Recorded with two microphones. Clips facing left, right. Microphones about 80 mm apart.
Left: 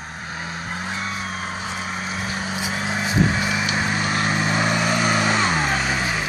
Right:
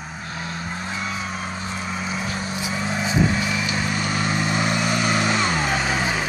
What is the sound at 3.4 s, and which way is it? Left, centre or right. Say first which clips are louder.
Vehicle: left 1 dB; left.